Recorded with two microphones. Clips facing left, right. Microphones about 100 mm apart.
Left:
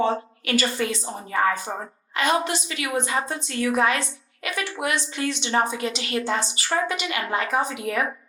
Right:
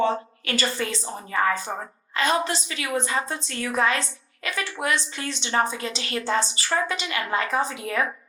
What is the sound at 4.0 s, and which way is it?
Speech, 20° left (ahead or behind).